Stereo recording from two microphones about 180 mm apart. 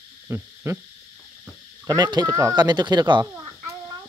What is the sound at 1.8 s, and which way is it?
Speech, 20° right (ahead or behind).